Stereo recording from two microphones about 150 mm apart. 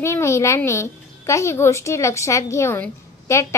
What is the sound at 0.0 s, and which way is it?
A woman's voice, 20° left (ahead or behind).